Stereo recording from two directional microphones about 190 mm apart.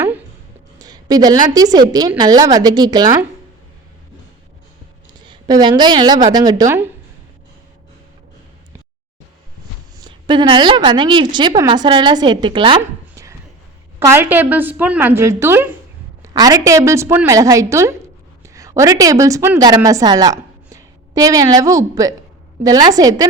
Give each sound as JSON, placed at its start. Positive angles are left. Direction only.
{"t": 0.8, "sound": "a sound", "side_deg": -20}
{"t": 1.5, "sound": "a woman's voice", "side_deg": -20}
{"t": 5.2, "sound": "a woman's voice", "side_deg": -20}
{"t": 10.0, "sound": "a woman's voice", "side_deg": -25}
{"t": 12.8, "sound": "a sound", "side_deg": -15}
{"t": 14.0, "sound": "a woman's voice", "side_deg": -10}